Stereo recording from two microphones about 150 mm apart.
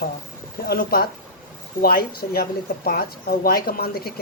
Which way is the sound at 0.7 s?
85° left.